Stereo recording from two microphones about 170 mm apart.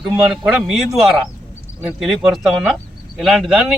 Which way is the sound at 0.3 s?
Centre (ahead or behind).